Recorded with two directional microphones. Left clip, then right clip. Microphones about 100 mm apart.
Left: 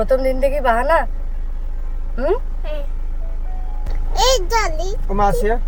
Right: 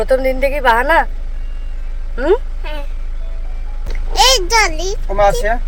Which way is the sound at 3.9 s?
10° left (ahead or behind).